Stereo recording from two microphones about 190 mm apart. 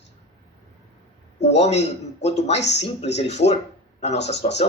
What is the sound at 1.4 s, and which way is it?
A man's voice, 35° left (ahead or behind).